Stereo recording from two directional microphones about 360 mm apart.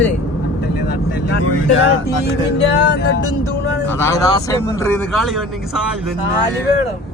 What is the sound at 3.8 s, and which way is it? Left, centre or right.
Speech, centre.